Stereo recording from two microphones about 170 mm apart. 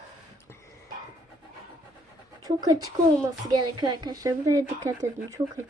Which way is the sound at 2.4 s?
20° right (ahead or behind).